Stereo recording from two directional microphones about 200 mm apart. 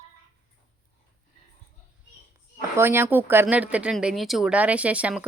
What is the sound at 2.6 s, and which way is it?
Speech, 10° right (ahead or behind).